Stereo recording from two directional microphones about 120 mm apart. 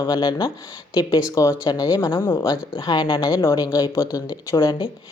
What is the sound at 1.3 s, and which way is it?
Speech, 25° left (ahead or behind).